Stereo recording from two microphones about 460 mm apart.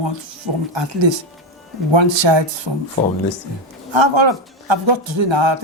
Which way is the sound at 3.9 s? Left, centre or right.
Right.